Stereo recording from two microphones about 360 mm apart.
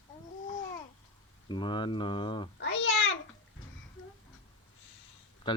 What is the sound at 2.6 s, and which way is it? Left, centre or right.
Babbling, left.